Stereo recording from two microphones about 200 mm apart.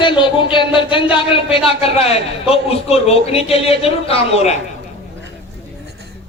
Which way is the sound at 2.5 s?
30° left (ahead or behind).